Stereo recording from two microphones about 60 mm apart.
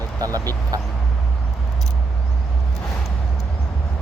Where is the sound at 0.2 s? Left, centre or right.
Right.